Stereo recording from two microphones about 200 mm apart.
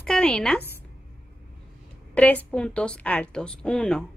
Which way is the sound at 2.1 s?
5° left (ahead or behind).